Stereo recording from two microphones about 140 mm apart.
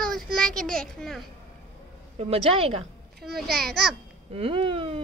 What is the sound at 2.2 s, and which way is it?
Speech, 45° right (ahead or behind).